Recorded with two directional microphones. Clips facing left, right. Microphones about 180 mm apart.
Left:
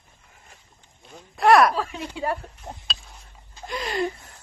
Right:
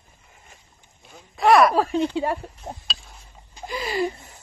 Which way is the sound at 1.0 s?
Centre (ahead or behind).